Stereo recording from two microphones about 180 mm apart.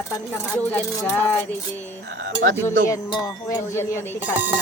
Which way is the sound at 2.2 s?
90° right.